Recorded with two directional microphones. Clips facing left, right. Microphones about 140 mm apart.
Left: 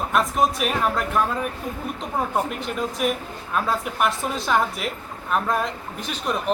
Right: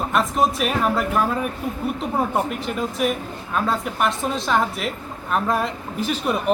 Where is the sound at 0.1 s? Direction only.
Centre (ahead or behind).